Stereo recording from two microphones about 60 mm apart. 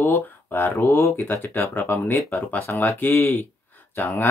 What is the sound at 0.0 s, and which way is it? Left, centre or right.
Speech, left.